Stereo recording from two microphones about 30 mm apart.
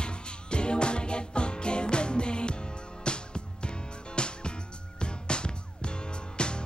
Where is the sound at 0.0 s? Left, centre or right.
Left.